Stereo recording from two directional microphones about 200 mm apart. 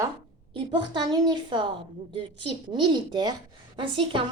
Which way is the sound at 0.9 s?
20° right (ahead or behind).